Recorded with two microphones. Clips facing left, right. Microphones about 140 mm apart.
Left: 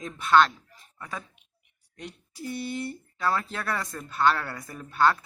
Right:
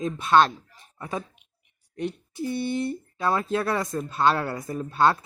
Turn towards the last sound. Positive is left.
turn(degrees=-25)  # may be behind; listen again after turning